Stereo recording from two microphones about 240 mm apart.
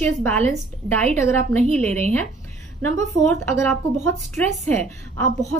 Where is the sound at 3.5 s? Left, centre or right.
Centre.